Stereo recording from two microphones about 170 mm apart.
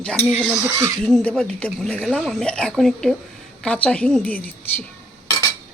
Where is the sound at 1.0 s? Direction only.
5° left (ahead or behind).